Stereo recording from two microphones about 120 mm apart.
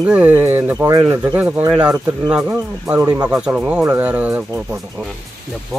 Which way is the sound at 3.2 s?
10° right (ahead or behind).